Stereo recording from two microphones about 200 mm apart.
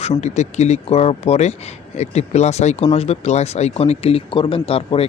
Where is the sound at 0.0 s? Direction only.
30° left (ahead or behind).